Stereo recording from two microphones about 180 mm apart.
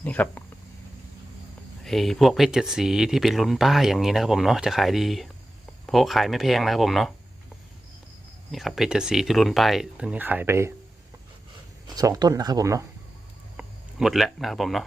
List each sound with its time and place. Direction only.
0.0 s speech: 10° left (ahead or behind)
1.8 s speech: centre (ahead or behind)
8.5 s speech: centre (ahead or behind)
11.9 s speech: 20° right (ahead or behind)
13.6 s speech: centre (ahead or behind)